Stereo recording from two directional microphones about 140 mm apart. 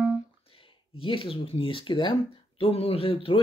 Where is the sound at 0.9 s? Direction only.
40° left (ahead or behind).